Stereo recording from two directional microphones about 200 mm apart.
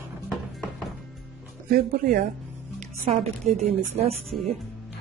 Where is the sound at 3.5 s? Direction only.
30° right (ahead or behind).